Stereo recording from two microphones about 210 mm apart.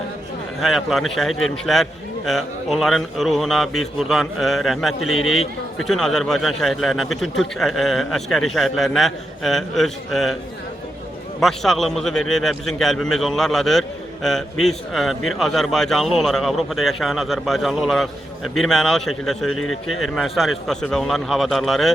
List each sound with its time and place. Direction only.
0.6 s a man's voice: centre (ahead or behind)
11.3 s a man's voice: centre (ahead or behind)
19.5 s speech: 90° left
20.0 s a man's voice: centre (ahead or behind)